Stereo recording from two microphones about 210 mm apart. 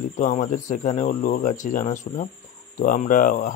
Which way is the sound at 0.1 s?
35° left (ahead or behind).